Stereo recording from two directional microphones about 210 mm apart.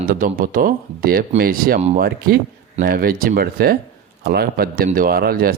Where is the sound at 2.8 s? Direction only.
45° right (ahead or behind).